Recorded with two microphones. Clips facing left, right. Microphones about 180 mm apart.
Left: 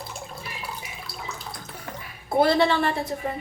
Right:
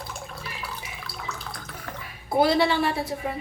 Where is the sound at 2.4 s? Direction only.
5° right (ahead or behind).